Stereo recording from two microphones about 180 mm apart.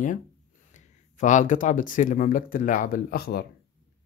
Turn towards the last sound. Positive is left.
turn(degrees=60)  # may be behind; listen again after turning